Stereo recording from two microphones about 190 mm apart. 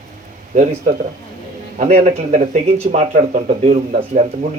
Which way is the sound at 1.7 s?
35° right (ahead or behind).